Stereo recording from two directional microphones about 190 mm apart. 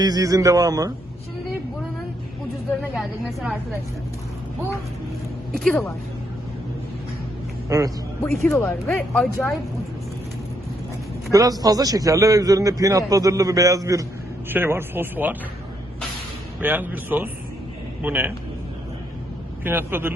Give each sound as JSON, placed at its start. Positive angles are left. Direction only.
{"t": 0.0, "sound": "a man's voice", "side_deg": -20}
{"t": 2.9, "sound": "speech", "side_deg": 0}
{"t": 5.5, "sound": "speech", "side_deg": 0}
{"t": 7.7, "sound": "a man's voice", "side_deg": -15}
{"t": 8.2, "sound": "speech", "side_deg": 10}
{"t": 11.3, "sound": "a man's voice", "side_deg": -20}
{"t": 16.6, "sound": "a man's voice", "side_deg": -10}
{"t": 19.6, "sound": "a man's voice", "side_deg": -10}